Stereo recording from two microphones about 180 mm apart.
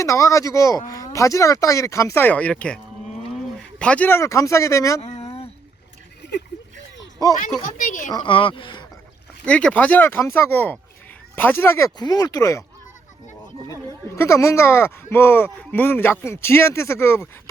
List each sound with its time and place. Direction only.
0.0 s speech: 15° left (ahead or behind)
4.9 s a sound: 35° left (ahead or behind)
7.2 s speech: 20° left (ahead or behind)
7.6 s speech: 45° left (ahead or behind)
8.1 s speech: 30° left (ahead or behind)
9.5 s speech: 5° left (ahead or behind)
14.2 s speech: 15° left (ahead or behind)